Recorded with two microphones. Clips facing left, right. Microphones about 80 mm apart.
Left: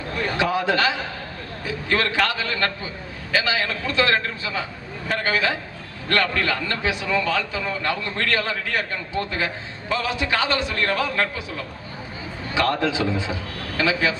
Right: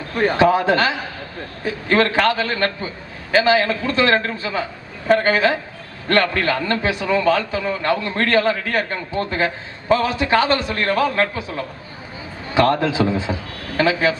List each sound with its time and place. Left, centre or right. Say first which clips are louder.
0.2 s a man's voice: right 8 dB; right